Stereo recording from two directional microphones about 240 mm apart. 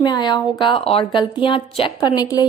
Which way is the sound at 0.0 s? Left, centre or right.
Centre.